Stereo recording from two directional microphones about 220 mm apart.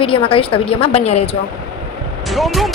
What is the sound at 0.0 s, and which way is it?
Speech, 25° left (ahead or behind).